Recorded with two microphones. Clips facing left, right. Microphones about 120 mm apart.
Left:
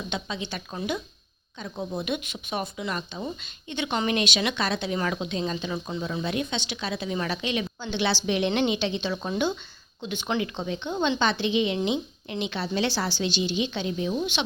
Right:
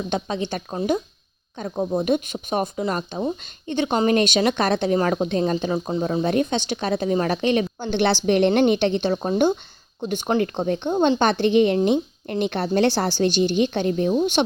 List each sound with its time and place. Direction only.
0.1 s speech: 45° right (ahead or behind)